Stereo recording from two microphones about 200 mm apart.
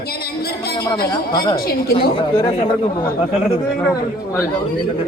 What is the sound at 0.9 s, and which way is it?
Speech, 45° left (ahead or behind).